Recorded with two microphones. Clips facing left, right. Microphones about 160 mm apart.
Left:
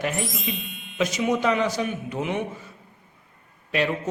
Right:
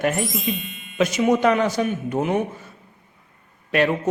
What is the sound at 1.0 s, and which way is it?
Speech, 55° right (ahead or behind).